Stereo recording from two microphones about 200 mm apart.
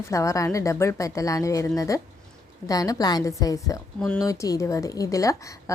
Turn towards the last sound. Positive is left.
turn(degrees=15)  # may be behind; listen again after turning